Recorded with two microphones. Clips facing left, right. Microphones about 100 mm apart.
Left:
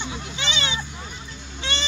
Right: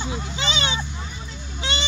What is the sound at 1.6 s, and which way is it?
Honk, 15° right (ahead or behind).